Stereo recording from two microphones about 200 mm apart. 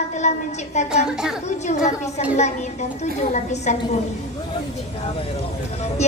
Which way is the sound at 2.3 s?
35° left (ahead or behind).